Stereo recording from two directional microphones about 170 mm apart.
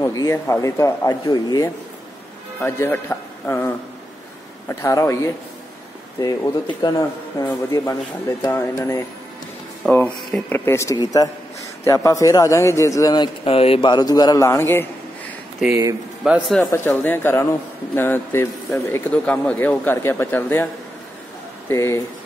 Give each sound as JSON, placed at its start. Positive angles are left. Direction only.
{"t": 0.0, "sound": "a man's voice", "side_deg": 20}
{"t": 15.7, "sound": "speech", "side_deg": -20}
{"t": 16.3, "sound": "speech", "side_deg": 0}
{"t": 16.7, "sound": "speech", "side_deg": 10}
{"t": 21.6, "sound": "speech", "side_deg": 15}